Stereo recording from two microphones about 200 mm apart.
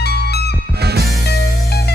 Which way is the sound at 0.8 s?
55° right (ahead or behind).